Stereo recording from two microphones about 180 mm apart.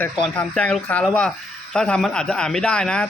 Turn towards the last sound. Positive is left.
turn(degrees=5)  # may be behind; listen again after turning